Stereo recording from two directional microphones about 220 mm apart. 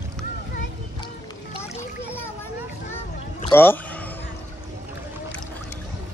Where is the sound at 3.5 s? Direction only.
10° left (ahead or behind).